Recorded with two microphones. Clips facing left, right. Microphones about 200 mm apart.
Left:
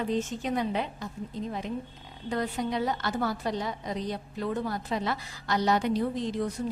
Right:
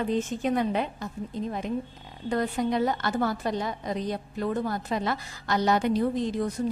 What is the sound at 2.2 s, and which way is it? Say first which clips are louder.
A woman's voice: right 4 dB; 50° right (ahead or behind).